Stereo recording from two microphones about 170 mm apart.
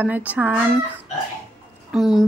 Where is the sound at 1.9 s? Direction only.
Centre (ahead or behind).